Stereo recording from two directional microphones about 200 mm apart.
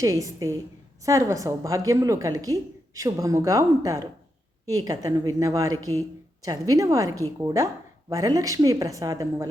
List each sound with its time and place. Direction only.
0.0 s a woman's voice: 15° right (ahead or behind)